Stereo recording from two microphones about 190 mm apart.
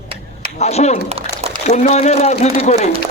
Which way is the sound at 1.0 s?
30° right (ahead or behind).